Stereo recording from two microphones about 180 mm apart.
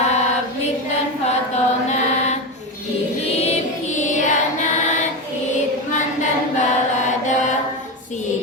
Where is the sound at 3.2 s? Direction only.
35° left (ahead or behind).